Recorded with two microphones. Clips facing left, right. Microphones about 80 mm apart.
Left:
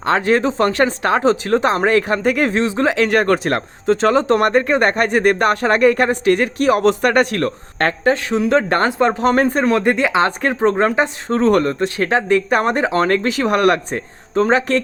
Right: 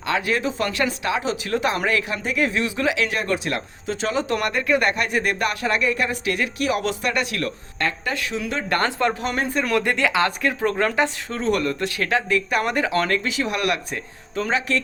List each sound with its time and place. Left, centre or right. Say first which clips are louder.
0.0 s speech: left 7 dB; left
2.6 s speech: left 6 dB; left
8.0 s speech: left 10 dB; left
8.8 s speech: left 6 dB; left
9.1 s speech: left 9 dB; left
9.6 s speech: left 5 dB; left
11.3 s speech: left 8 dB; left
13.1 s speech: left 8 dB; left